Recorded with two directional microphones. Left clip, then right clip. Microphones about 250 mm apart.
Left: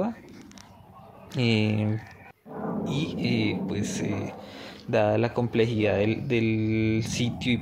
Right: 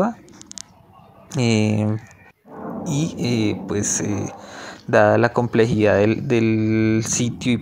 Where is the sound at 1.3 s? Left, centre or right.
Right.